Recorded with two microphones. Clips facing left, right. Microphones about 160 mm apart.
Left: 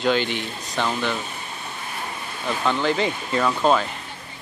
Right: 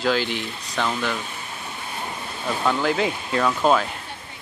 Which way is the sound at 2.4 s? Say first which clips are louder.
Even; 5° right (ahead or behind).